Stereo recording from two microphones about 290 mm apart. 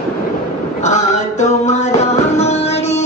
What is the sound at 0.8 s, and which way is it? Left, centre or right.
Music, left.